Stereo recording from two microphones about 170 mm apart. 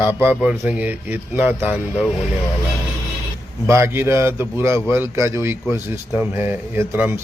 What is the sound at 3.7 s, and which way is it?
A man's voice, 15° right (ahead or behind).